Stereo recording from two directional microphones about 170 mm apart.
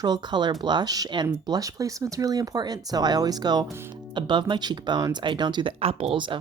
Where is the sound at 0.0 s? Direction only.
25° right (ahead or behind).